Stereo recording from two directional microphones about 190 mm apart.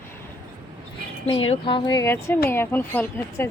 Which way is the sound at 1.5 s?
25° left (ahead or behind).